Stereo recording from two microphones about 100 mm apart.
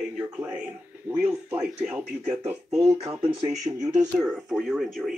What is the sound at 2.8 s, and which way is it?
Speech, 35° right (ahead or behind).